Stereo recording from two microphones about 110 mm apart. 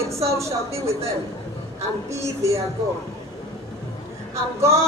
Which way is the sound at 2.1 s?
25° right (ahead or behind).